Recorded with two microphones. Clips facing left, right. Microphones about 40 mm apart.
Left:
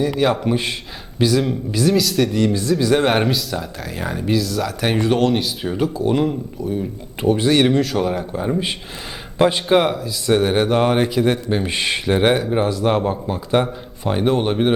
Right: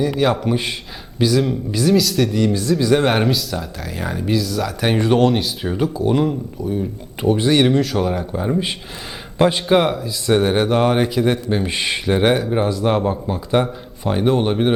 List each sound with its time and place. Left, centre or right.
0.0 s a man's voice: centre